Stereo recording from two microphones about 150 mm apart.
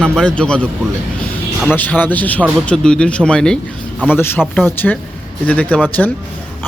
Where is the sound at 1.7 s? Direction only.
10° left (ahead or behind).